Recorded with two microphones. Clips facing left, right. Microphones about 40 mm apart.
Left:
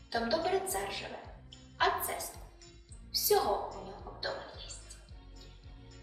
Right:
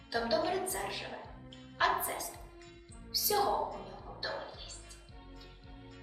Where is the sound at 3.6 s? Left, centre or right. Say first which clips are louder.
Right 1 dB; right.